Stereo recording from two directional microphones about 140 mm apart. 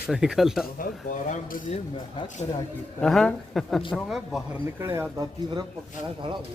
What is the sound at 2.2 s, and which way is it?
Speech, 60° left (ahead or behind).